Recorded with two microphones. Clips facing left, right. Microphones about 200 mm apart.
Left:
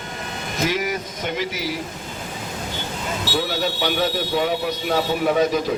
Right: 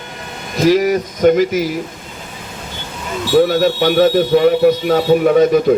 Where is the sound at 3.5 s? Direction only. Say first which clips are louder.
Right 9 dB; 55° right (ahead or behind).